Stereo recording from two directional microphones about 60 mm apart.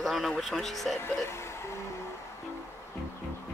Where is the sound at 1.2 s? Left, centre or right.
Left.